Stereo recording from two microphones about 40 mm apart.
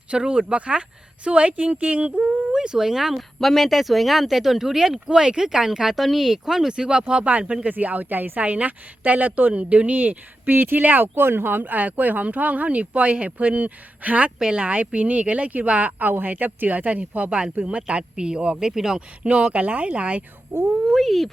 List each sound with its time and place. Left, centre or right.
0.1 s speech: right
2.2 s speech: centre
3.2 s speech: centre
5.0 s speech: right
7.3 s speech: right
8.4 s speech: right
14.3 s speech: centre
14.6 s speech: right
16.0 s speech: right; by 18.9 s centre
18.9 s speech: right
20.5 s speech: right
20.9 s speech: centre